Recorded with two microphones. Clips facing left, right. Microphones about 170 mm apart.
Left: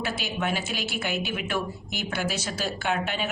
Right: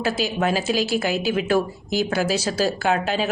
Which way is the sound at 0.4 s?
90° right.